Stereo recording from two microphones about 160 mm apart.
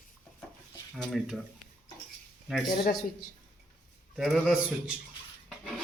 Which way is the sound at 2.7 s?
60° left (ahead or behind).